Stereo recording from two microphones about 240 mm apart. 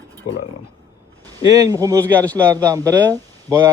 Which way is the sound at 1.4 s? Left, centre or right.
Centre.